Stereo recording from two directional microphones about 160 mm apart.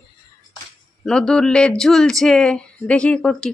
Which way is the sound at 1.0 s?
5° left (ahead or behind).